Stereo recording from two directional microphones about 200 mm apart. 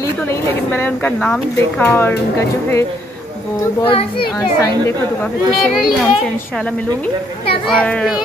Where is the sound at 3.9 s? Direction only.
20° left (ahead or behind).